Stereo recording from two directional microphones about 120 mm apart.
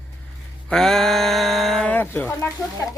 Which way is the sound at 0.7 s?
5° left (ahead or behind).